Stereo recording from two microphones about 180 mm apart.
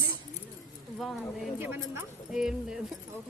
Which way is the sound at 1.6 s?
10° right (ahead or behind).